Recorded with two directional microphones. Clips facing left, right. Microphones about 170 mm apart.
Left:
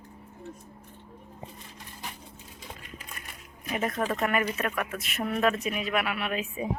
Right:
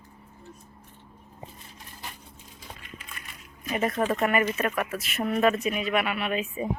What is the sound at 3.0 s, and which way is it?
Crushing, 45° left (ahead or behind).